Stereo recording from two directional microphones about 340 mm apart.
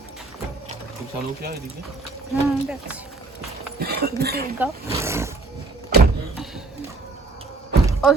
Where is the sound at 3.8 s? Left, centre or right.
Right.